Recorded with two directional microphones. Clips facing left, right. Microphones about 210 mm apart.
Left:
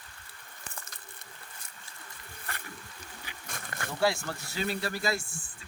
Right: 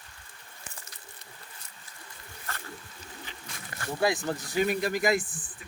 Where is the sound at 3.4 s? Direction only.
50° left (ahead or behind).